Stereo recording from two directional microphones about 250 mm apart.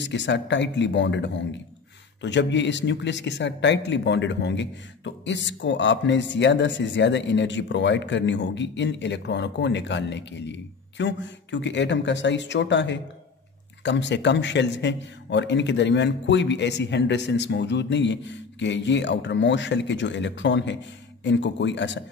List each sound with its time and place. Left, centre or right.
0.0 s speech: left